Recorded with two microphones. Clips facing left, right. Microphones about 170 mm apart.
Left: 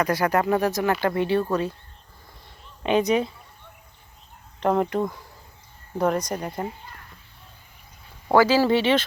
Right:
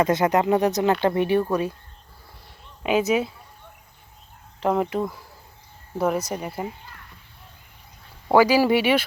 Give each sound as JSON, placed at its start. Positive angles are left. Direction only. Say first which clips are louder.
{"t": 0.0, "sound": "speech", "louder": "right 2 dB", "side_deg": -20}
{"t": 2.8, "sound": "speech", "louder": "even", "side_deg": -5}
{"t": 4.6, "sound": "speech", "louder": "left 1 dB", "side_deg": -5}
{"t": 8.3, "sound": "speech", "louder": "right 1 dB", "side_deg": -15}